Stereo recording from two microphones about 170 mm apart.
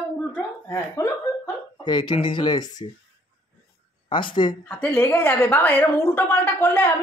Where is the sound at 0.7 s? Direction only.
15° left (ahead or behind).